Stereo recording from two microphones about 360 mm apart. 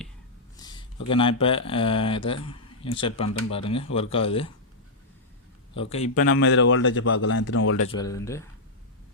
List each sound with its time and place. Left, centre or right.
0.5 s a sound: centre
1.1 s speech: centre
6.0 s speech: left
7.9 s speech: centre